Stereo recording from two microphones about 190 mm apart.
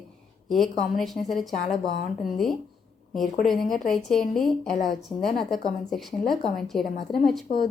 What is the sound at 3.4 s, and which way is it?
Speech, centre (ahead or behind).